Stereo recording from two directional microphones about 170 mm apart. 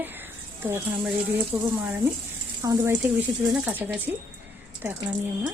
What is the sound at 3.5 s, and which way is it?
Speech, 5° right (ahead or behind).